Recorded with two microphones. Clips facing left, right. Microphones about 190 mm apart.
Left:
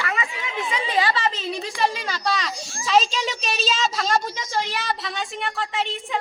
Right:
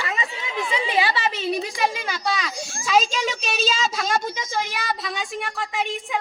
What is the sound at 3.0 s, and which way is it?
Speech, 50° right (ahead or behind).